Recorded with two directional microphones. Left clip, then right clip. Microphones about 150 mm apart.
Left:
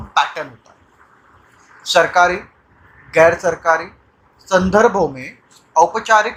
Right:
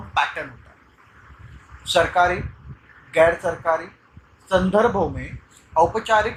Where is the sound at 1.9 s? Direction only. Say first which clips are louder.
Left 5 dB; 30° left (ahead or behind).